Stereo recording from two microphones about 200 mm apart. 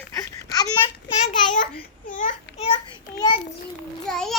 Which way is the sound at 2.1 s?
40° left (ahead or behind).